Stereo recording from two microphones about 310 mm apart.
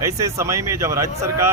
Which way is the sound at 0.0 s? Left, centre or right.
Centre.